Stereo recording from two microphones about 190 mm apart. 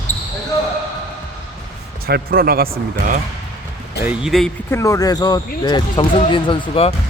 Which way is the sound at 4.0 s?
5° right (ahead or behind).